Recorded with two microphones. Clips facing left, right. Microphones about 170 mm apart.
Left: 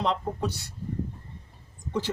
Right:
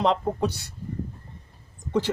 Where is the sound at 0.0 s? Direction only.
75° right (ahead or behind).